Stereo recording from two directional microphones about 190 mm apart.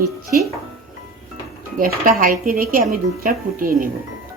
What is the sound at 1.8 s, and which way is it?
Speech, 50° right (ahead or behind).